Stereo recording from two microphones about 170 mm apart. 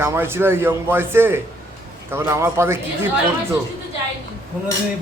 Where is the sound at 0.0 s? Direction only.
15° right (ahead or behind).